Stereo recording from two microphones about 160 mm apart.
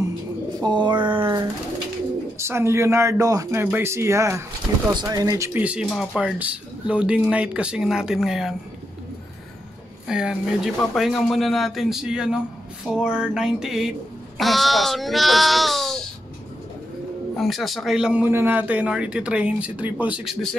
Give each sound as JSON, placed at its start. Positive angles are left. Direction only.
{"t": 0.6, "sound": "speech", "side_deg": -30}
{"t": 2.3, "sound": "speech", "side_deg": -15}
{"t": 10.0, "sound": "speech", "side_deg": -5}
{"t": 17.4, "sound": "speech", "side_deg": 0}